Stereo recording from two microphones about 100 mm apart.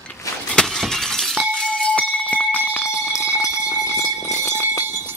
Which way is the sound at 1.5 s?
10° left (ahead or behind).